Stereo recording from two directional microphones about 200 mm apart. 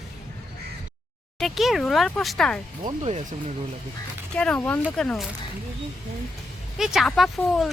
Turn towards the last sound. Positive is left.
turn(degrees=0)  # may be behind; listen again after turning